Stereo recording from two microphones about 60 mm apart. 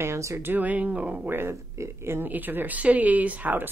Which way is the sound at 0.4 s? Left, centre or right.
Right.